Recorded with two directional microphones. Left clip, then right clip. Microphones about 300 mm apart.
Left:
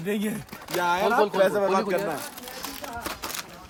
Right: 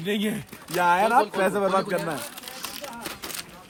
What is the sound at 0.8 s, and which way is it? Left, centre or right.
Speech, right.